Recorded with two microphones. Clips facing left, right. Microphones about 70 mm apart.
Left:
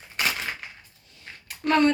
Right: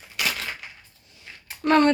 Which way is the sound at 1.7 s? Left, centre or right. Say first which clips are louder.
Right 2 dB; right.